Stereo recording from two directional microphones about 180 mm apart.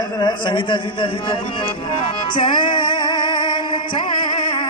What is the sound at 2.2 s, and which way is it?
Music, 25° left (ahead or behind).